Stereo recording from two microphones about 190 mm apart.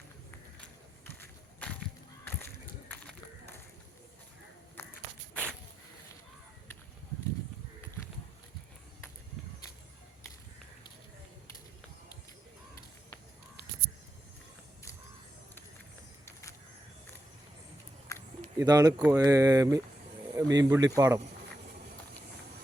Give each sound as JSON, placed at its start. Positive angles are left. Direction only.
{"t": 1.0, "sound": "run", "side_deg": 10}
{"t": 4.8, "sound": "walk", "side_deg": 10}
{"t": 5.3, "sound": "a sound", "side_deg": 5}
{"t": 16.2, "sound": "vehicle", "side_deg": 15}
{"t": 18.6, "sound": "speech", "side_deg": -20}